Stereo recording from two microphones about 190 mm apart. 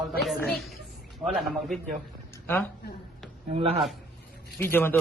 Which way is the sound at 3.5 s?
30° right (ahead or behind).